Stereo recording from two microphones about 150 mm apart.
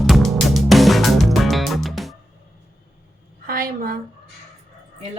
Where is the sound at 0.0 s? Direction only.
Centre (ahead or behind).